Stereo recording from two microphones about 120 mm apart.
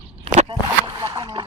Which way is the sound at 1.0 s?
25° right (ahead or behind).